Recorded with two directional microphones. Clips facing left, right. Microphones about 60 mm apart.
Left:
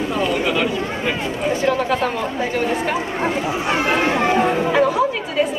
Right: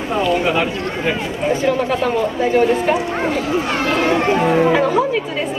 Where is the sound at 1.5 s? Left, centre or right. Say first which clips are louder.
Right 2 dB; centre.